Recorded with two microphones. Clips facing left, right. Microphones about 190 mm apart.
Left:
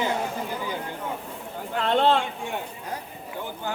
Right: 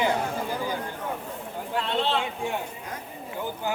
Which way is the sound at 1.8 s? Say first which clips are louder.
Left 7 dB; 50° left (ahead or behind).